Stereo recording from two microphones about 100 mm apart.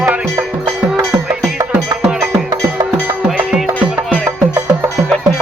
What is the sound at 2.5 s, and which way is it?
Music, 40° right (ahead or behind).